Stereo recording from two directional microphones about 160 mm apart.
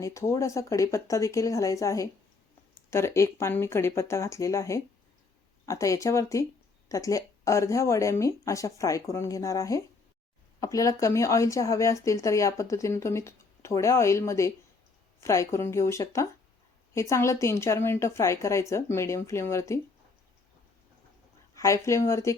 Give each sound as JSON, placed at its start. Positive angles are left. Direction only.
{"t": 0.0, "sound": "speech", "side_deg": 20}
{"t": 21.5, "sound": "a sound", "side_deg": 20}
{"t": 21.8, "sound": "speech", "side_deg": 15}